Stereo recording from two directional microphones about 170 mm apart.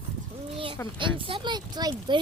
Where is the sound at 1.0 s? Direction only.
30° right (ahead or behind).